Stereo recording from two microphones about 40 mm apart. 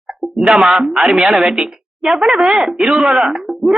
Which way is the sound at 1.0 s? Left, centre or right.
Centre.